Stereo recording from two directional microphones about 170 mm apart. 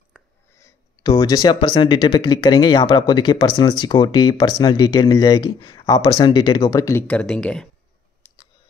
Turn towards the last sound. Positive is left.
turn(degrees=5)  # may be behind; listen again after turning